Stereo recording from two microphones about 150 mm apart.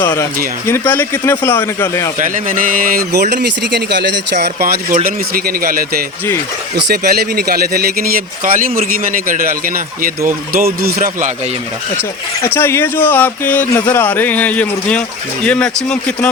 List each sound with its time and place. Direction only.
0.7 s speech: 15° left (ahead or behind)
2.1 s a man's voice: 60° right (ahead or behind)
6.8 s a man's voice: 90° right; by 11.3 s 75° right (ahead or behind)
12.5 s speech: 15° left (ahead or behind)